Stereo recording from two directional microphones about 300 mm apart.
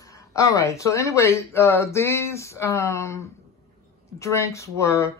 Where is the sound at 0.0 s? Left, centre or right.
Centre.